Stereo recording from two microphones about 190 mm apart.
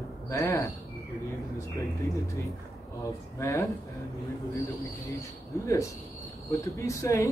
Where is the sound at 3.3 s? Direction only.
15° left (ahead or behind).